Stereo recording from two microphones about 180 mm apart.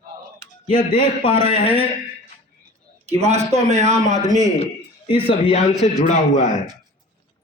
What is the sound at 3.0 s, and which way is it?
A man's voice, 35° right (ahead or behind).